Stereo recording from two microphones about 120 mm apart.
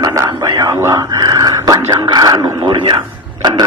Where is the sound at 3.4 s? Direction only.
35° right (ahead or behind).